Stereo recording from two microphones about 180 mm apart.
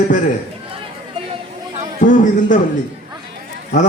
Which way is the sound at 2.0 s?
45° left (ahead or behind).